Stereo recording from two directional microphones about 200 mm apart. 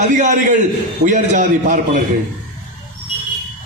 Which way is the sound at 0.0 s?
40° right (ahead or behind).